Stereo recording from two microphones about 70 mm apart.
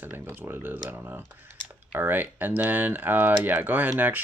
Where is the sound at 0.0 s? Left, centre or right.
Right.